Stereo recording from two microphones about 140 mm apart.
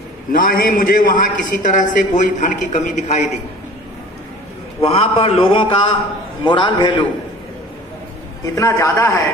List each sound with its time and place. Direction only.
0.3 s a man's voice: 90° left; by 3.3 s 55° left (ahead or behind)
4.8 s a man's voice: 45° left (ahead or behind)
8.5 s a man's voice: 20° left (ahead or behind)